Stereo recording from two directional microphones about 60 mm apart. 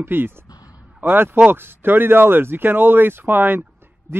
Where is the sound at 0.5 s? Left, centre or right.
Left.